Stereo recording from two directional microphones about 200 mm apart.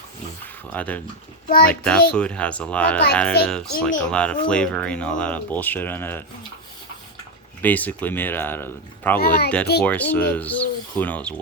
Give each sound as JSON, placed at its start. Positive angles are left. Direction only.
{"t": 0.7, "sound": "speech", "side_deg": 10}
{"t": 1.5, "sound": "speech", "side_deg": 50}
{"t": 1.7, "sound": "speech", "side_deg": 5}
{"t": 7.6, "sound": "speech", "side_deg": 10}
{"t": 9.1, "sound": "speech", "side_deg": 50}
{"t": 9.8, "sound": "speech", "side_deg": 10}